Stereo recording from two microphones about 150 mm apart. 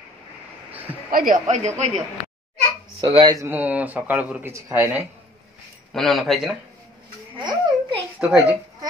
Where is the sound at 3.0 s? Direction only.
35° right (ahead or behind).